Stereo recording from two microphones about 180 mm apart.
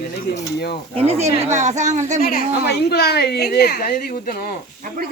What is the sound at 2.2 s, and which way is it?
A woman's voice, 55° left (ahead or behind).